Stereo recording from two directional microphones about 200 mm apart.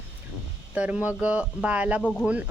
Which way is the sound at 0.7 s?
5° right (ahead or behind).